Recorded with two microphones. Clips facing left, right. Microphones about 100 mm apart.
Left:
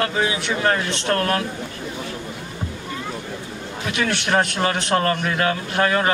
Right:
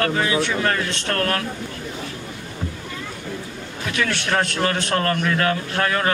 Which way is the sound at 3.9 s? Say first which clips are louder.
Left 2 dB; 20° left (ahead or behind).